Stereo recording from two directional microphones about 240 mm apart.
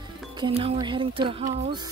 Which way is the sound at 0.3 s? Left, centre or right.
Right.